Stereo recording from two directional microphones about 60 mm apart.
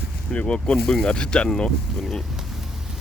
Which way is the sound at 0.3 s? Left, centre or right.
Centre.